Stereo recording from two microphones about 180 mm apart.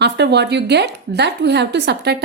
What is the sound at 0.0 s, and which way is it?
Speech, 70° right (ahead or behind).